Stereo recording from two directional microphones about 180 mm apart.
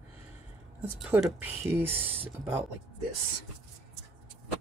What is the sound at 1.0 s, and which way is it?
Speech, centre (ahead or behind).